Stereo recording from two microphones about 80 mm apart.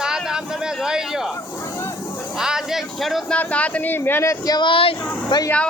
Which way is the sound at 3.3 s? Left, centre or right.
Centre.